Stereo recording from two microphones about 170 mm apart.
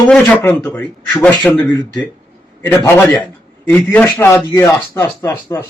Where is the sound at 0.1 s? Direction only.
10° left (ahead or behind).